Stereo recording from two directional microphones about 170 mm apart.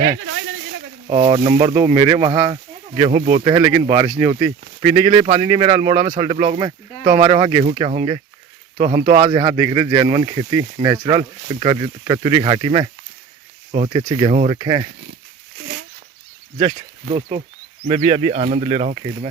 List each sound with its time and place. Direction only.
1.0 s speech: 30° right (ahead or behind)
13.7 s speech: 40° right (ahead or behind)
13.9 s speech: 25° right (ahead or behind)
16.6 s speech: 30° right (ahead or behind)